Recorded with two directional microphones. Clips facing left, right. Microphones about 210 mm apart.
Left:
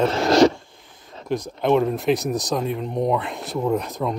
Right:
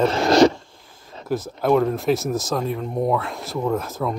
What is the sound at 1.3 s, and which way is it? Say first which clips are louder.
Speech: even; 5° right (ahead or behind).